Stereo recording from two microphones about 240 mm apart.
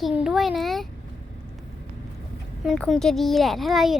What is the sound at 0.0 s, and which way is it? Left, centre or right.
Speech, centre.